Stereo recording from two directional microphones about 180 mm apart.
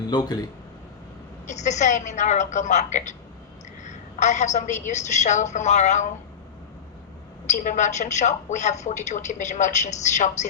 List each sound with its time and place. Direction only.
0.1 s speech: 20° left (ahead or behind)
1.5 s a woman's voice: 40° left (ahead or behind)
7.4 s a woman's voice: 40° left (ahead or behind)